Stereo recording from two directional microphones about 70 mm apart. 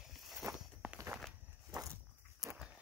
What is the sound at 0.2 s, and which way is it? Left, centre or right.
Walk, centre.